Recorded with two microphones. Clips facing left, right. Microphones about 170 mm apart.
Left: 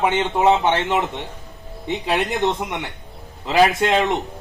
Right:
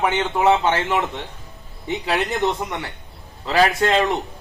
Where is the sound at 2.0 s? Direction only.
20° left (ahead or behind).